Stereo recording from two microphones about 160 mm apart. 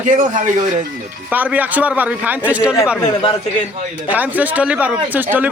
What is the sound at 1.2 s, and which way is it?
A man's voice, 10° right (ahead or behind).